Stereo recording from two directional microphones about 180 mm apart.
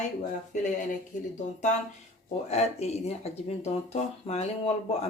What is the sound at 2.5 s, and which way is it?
Speech, 35° left (ahead or behind).